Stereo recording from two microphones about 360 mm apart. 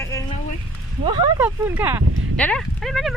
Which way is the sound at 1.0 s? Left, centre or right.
Centre.